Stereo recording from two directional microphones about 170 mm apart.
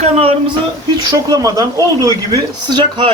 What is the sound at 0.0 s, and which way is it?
Speech, 40° right (ahead or behind).